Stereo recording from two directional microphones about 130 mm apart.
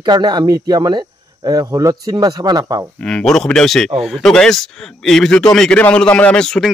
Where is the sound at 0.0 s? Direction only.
35° right (ahead or behind).